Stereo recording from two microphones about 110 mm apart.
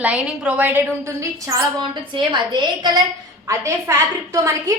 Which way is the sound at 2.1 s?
50° right (ahead or behind).